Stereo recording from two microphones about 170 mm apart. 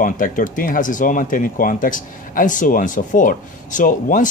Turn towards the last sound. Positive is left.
turn(degrees=50)  # may be behind; listen again after turning